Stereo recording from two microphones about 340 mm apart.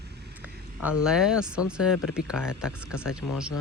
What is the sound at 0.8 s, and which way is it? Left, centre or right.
Speech, centre.